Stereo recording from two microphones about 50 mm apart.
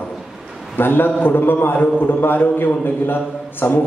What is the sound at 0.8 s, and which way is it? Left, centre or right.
A man's voice, left.